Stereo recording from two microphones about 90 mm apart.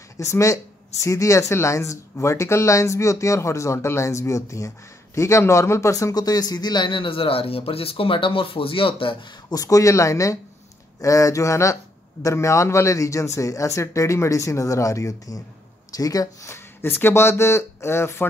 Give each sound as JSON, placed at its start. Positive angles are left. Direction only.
{"t": 0.2, "sound": "speech", "side_deg": 35}
{"t": 9.5, "sound": "speech", "side_deg": 40}